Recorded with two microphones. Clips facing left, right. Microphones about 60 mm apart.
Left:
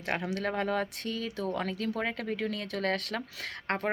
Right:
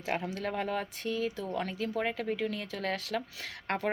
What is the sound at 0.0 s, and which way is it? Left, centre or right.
Speech, left.